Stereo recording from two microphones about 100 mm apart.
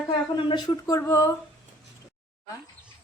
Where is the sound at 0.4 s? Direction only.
55° left (ahead or behind).